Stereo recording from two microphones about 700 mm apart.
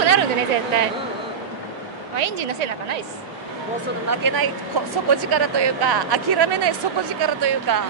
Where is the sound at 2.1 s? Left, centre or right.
Right.